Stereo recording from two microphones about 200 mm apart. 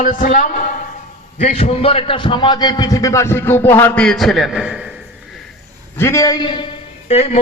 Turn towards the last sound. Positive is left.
turn(degrees=35)  # may be behind; listen again after turning